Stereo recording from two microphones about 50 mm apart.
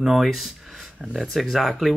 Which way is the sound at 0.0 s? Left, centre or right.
Centre.